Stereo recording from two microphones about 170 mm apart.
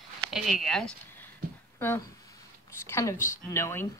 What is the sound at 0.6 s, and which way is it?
Speech, 5° left (ahead or behind).